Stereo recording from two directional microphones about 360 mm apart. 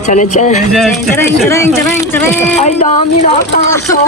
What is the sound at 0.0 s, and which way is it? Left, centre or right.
Speech, centre.